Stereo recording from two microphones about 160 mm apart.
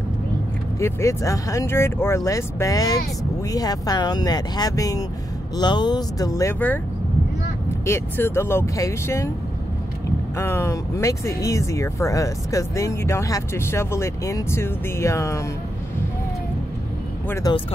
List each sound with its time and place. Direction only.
0.7 s speech: 20° left (ahead or behind)
7.8 s speech: 15° left (ahead or behind)
10.3 s speech: 15° left (ahead or behind)
17.3 s speech: 20° left (ahead or behind)